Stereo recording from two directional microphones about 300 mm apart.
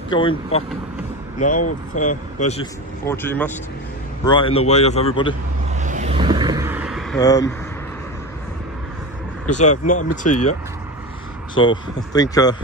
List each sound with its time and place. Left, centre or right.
0.1 s speech: centre
3.1 s speech: centre
5.8 s vehicle: right; by 7.2 s centre
7.2 s speech: centre
9.6 s speech: left
10.3 s speech: left
11.5 s speech: centre